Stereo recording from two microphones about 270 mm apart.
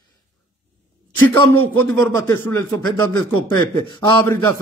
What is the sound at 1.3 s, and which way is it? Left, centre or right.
Speech, centre.